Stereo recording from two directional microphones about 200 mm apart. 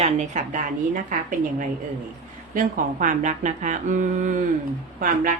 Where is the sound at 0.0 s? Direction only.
35° right (ahead or behind).